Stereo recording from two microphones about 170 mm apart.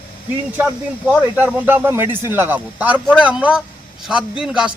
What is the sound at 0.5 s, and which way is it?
Speech, 10° right (ahead or behind).